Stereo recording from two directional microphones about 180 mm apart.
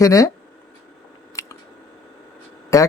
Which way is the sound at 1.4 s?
15° left (ahead or behind).